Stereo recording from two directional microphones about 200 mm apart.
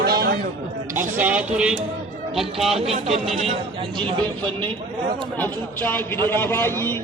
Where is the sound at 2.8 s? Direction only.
30° right (ahead or behind).